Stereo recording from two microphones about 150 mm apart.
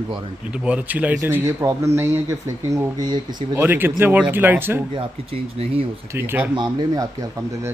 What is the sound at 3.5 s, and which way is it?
A man's voice, 15° right (ahead or behind).